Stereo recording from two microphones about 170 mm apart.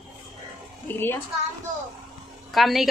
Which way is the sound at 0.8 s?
10° left (ahead or behind).